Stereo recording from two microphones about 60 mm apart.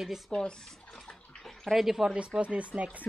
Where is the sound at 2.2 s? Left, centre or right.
Centre.